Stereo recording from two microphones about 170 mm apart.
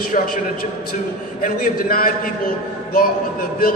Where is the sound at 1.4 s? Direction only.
55° left (ahead or behind).